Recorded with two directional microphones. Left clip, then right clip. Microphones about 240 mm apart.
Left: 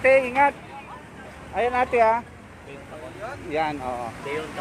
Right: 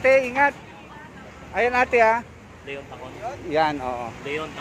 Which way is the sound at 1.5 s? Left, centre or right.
Centre.